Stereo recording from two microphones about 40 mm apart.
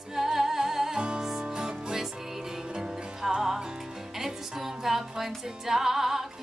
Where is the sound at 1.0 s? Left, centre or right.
Right.